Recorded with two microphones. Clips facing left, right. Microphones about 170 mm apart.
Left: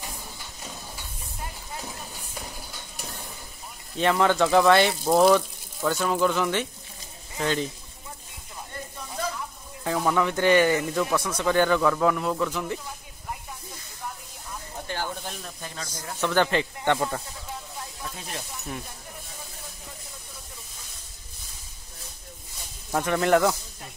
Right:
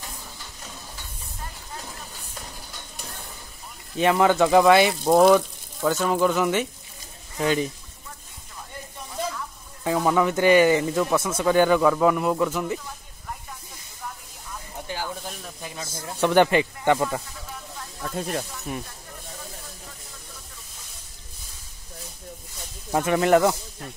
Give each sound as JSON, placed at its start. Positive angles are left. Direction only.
{"t": 4.0, "sound": "speech", "side_deg": -10}
{"t": 9.9, "sound": "speech", "side_deg": -10}
{"t": 15.0, "sound": "snake", "side_deg": -5}
{"t": 15.8, "sound": "speech", "side_deg": -20}
{"t": 18.1, "sound": "speech", "side_deg": -50}
{"t": 22.9, "sound": "speech", "side_deg": -5}